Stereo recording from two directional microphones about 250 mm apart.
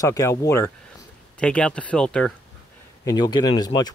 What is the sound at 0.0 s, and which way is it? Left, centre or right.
Speech, centre.